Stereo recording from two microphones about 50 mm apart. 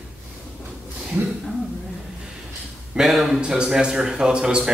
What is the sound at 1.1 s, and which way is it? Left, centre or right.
Speech, right.